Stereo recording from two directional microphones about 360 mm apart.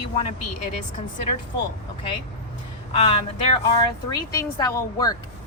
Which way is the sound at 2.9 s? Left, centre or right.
Centre.